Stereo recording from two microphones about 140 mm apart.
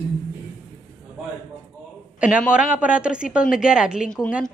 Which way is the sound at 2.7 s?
10° right (ahead or behind).